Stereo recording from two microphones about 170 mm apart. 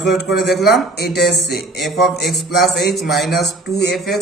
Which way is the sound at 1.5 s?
Centre (ahead or behind).